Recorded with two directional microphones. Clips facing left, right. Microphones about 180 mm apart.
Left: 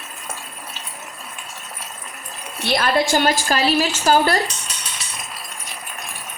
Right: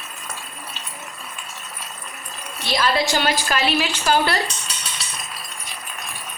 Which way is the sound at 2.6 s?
55° left (ahead or behind).